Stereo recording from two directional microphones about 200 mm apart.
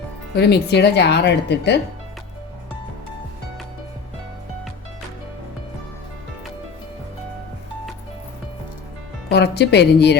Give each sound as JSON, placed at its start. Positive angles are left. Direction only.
{"t": 0.3, "sound": "speech", "side_deg": 55}
{"t": 9.3, "sound": "speech", "side_deg": 55}